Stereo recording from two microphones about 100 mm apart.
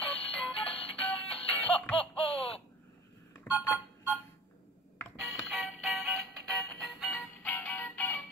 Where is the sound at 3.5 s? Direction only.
15° left (ahead or behind).